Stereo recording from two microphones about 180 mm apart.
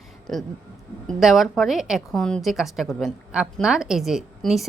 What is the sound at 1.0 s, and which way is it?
A woman's voice, centre (ahead or behind).